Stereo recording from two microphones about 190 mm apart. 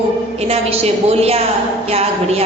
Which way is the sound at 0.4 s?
30° right (ahead or behind).